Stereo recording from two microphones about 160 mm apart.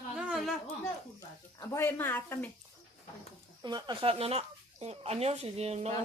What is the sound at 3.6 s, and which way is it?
Speech, 25° right (ahead or behind).